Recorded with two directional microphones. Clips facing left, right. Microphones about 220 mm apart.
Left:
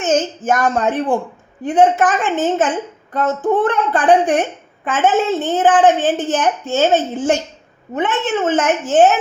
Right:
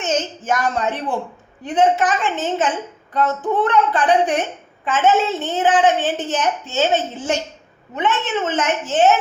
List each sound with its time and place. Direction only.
0.0 s a woman's voice: 50° left (ahead or behind)